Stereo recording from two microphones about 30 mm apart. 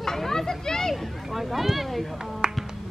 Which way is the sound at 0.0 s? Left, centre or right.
Centre.